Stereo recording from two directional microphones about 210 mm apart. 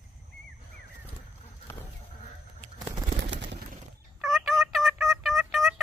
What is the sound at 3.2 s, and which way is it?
Bird, 55° right (ahead or behind).